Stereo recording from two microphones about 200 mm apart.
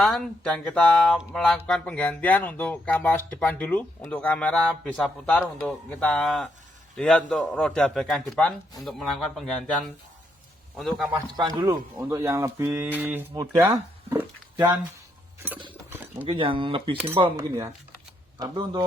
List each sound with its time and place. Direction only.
0.0 s a man's voice: 5° left (ahead or behind)
10.8 s a man's voice: centre (ahead or behind)
11.1 s speech: 20° right (ahead or behind)
15.9 s a sound: 10° right (ahead or behind)
16.2 s speech: 25° right (ahead or behind)